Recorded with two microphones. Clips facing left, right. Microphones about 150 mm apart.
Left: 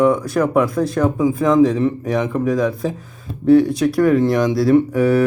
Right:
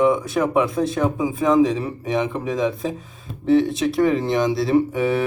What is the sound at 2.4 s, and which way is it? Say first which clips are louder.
Speech: left 4 dB; 25° right (ahead or behind).